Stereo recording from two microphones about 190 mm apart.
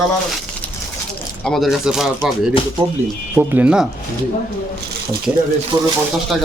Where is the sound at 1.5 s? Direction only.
Centre (ahead or behind).